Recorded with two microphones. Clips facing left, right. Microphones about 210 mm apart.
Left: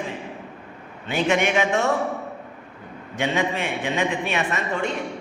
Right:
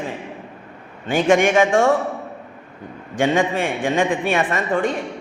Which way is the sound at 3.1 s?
50° right (ahead or behind).